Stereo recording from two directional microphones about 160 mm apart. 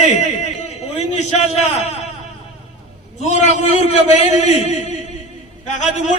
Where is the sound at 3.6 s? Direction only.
45° left (ahead or behind).